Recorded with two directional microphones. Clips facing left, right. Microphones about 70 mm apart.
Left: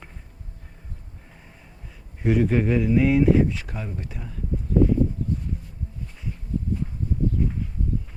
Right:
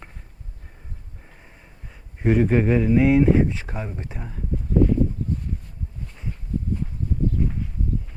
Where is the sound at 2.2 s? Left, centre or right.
Right.